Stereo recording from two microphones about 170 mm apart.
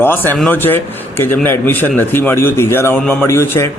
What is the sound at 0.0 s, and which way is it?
A man's voice, 10° left (ahead or behind).